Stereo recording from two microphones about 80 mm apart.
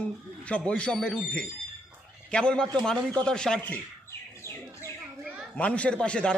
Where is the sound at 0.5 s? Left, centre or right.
Centre.